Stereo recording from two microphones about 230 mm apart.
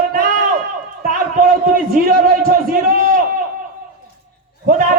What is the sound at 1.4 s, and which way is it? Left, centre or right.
A man's voice, right.